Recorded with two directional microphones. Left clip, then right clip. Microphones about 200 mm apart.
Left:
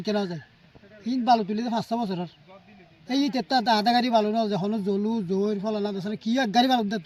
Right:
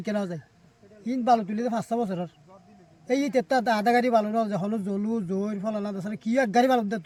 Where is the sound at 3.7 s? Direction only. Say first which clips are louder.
Left 1 dB; 10° right (ahead or behind).